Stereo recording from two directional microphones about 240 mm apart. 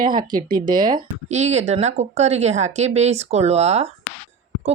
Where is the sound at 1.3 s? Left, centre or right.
Right.